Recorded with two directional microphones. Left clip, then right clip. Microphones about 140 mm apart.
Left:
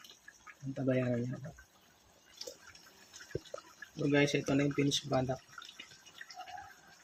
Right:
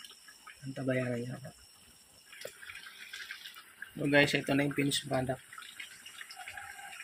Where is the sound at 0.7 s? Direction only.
10° left (ahead or behind).